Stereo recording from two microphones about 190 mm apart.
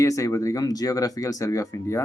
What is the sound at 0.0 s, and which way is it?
Speech, 15° left (ahead or behind).